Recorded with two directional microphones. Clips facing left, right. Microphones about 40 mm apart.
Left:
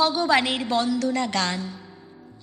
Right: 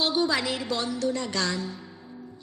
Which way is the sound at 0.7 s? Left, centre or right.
Left.